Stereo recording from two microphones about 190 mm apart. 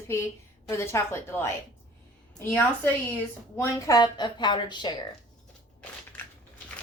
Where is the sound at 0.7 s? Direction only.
15° left (ahead or behind).